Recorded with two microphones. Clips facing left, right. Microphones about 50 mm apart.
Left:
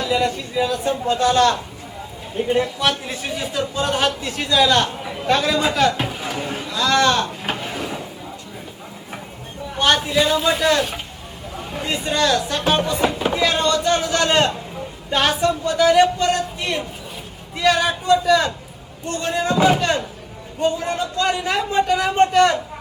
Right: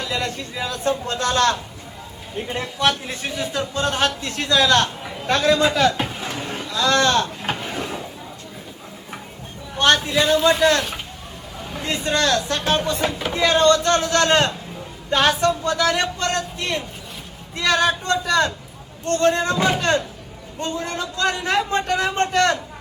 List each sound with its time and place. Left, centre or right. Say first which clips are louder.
0.1 s a man's voice: left 6 dB; centre
7.4 s drawer open or close: even; centre
9.7 s a man's voice: even; centre